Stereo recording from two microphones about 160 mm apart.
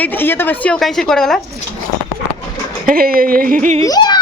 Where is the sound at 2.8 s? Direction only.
65° right (ahead or behind).